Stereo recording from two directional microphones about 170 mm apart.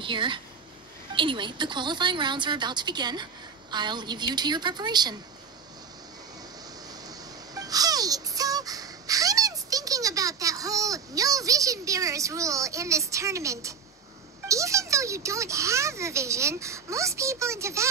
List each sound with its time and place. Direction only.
0.0 s a woman's voice: 30° right (ahead or behind)
7.1 s a sound: 20° right (ahead or behind)
14.5 s a child's voice: 20° right (ahead or behind)